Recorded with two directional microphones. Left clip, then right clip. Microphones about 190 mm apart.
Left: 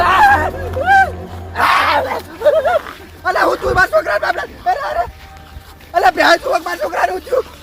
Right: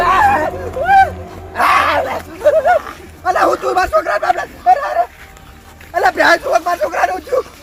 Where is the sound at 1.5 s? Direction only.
35° left (ahead or behind).